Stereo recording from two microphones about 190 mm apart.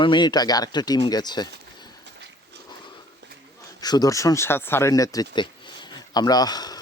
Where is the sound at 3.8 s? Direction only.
20° left (ahead or behind).